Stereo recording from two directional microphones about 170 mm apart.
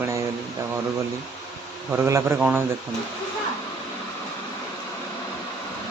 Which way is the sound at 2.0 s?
15° right (ahead or behind).